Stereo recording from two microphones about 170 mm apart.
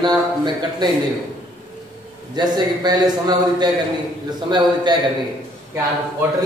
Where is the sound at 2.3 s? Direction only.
25° right (ahead or behind).